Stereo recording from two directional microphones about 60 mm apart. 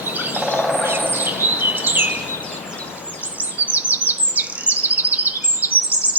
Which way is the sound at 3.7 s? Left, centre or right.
Right.